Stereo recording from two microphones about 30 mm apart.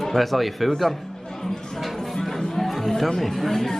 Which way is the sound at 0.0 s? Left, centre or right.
Centre.